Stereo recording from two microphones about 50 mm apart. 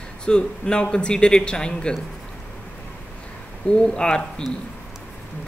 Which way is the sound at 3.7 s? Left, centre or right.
Centre.